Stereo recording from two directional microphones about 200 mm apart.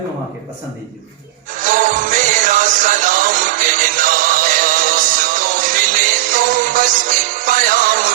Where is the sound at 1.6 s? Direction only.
40° right (ahead or behind).